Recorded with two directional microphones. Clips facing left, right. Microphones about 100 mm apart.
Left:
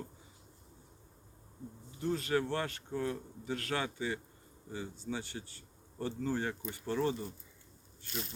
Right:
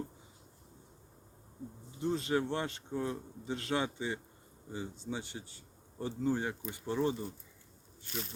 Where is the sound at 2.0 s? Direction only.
20° right (ahead or behind).